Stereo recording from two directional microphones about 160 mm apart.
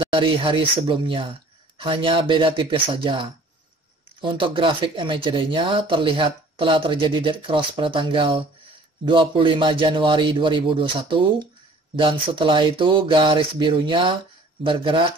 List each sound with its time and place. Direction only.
0.0 s speech: 35° right (ahead or behind)